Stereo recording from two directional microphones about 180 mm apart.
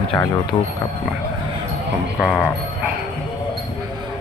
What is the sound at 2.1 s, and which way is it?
Speech, 10° left (ahead or behind).